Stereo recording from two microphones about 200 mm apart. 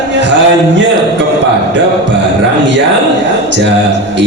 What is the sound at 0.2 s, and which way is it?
Speech, 60° right (ahead or behind).